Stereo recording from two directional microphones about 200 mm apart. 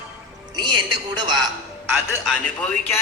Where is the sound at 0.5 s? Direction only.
20° right (ahead or behind).